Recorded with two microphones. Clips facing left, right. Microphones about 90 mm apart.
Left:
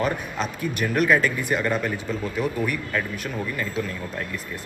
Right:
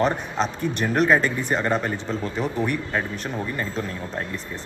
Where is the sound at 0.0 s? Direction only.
30° right (ahead or behind).